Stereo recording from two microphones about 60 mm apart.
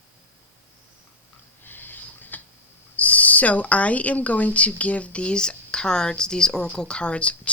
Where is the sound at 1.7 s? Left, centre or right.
Left.